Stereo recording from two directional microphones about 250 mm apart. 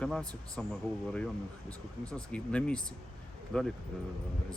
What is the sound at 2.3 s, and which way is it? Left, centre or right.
Speech, centre.